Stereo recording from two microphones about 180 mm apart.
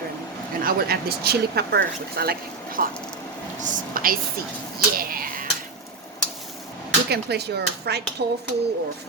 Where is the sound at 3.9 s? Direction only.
50° right (ahead or behind).